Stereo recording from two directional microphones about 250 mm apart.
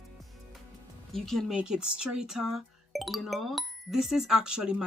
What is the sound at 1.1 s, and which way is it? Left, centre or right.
Speech, centre.